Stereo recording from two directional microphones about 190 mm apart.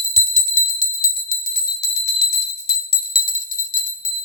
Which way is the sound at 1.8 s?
60° left (ahead or behind).